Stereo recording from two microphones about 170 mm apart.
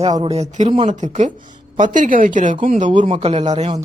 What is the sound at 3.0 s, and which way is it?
Speech, 35° right (ahead or behind).